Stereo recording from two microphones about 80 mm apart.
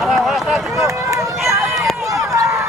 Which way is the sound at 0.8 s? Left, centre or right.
Right.